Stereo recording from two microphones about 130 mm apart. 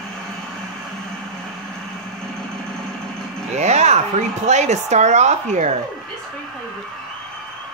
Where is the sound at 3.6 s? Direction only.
60° right (ahead or behind).